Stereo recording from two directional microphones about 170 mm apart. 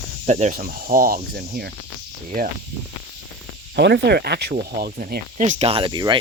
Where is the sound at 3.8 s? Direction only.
85° right; by 5.2 s 65° right (ahead or behind).